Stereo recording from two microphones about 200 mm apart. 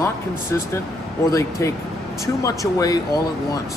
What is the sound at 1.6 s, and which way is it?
Speech, 15° left (ahead or behind).